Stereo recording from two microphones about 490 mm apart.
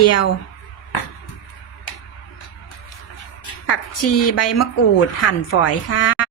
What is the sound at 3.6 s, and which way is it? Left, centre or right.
A woman's voice, left.